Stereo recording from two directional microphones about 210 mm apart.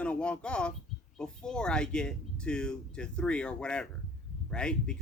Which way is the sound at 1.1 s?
5° left (ahead or behind).